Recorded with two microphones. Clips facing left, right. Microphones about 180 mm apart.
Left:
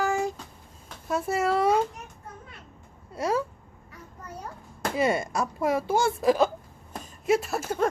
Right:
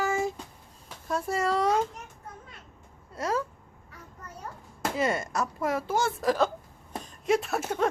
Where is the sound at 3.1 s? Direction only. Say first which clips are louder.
Left 3 dB; 10° left (ahead or behind).